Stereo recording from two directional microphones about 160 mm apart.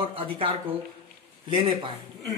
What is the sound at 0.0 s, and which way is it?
Speech, 35° right (ahead or behind).